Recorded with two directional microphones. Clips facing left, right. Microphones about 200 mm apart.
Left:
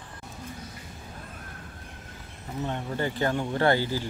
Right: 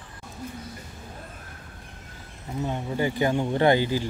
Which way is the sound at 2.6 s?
10° right (ahead or behind).